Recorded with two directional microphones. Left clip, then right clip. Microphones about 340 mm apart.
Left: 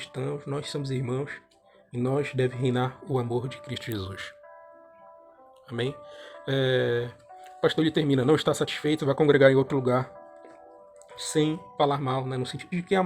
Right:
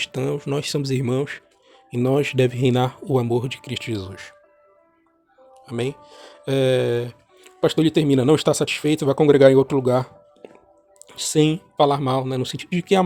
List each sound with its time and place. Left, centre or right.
0.0 s speech: right; by 4.4 s centre
5.6 s speech: centre
11.1 s speech: right